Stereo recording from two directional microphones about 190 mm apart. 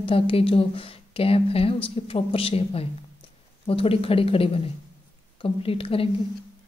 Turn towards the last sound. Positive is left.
turn(degrees=30)  # may be behind; listen again after turning